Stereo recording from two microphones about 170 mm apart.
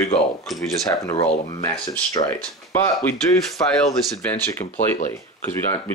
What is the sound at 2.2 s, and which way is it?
Speech, 40° left (ahead or behind).